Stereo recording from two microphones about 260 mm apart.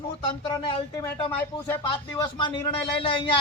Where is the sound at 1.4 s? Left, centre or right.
Centre.